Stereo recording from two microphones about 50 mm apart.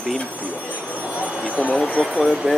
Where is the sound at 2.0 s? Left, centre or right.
Centre.